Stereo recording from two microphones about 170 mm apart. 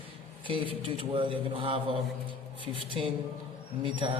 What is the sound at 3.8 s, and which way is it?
Speech, 30° right (ahead or behind).